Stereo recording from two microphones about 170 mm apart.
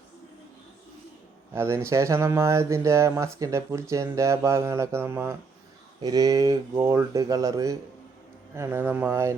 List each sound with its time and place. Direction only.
1.5 s speech: 15° right (ahead or behind)